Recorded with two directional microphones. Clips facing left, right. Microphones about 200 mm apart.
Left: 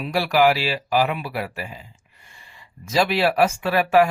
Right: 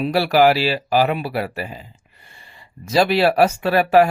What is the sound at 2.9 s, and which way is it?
Speech, 40° right (ahead or behind).